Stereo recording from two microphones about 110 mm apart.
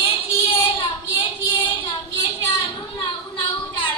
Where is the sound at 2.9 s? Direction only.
45° left (ahead or behind).